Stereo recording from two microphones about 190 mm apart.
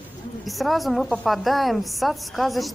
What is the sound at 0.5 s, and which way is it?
A woman's voice, centre (ahead or behind).